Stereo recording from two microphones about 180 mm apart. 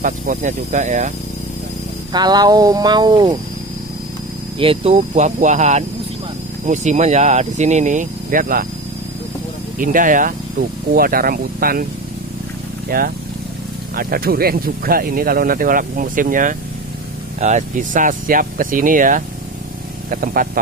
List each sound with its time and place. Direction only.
0.0 s speech: 45° right (ahead or behind)
2.1 s speech: 25° right (ahead or behind)
4.6 s speech: 35° right (ahead or behind); by 8.6 s 50° right (ahead or behind)
9.8 s speech: 50° right (ahead or behind)
12.9 s speech: 55° right (ahead or behind)